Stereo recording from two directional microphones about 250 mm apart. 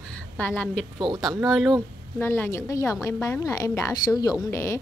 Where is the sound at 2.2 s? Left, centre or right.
Centre.